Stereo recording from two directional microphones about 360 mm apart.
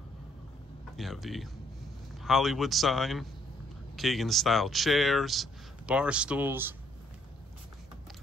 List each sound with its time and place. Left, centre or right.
0.9 s speech: centre